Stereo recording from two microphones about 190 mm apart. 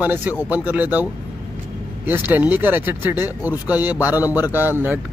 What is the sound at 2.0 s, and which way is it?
Speech, 10° right (ahead or behind).